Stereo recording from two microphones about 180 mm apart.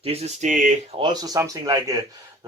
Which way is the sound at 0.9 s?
25° right (ahead or behind).